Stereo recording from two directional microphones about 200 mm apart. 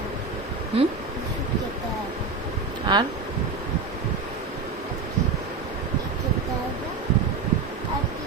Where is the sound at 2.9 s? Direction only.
20° right (ahead or behind).